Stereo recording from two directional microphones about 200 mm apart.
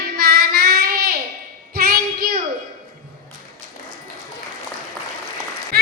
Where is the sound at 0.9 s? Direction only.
50° right (ahead or behind).